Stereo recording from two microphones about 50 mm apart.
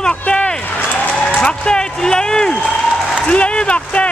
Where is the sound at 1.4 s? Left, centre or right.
Centre.